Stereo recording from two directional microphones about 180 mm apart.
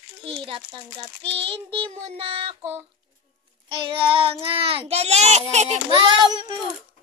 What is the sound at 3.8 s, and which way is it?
Child singing, 30° right (ahead or behind).